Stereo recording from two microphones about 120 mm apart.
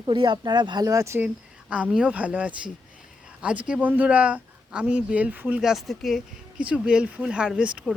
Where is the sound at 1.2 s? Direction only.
10° right (ahead or behind).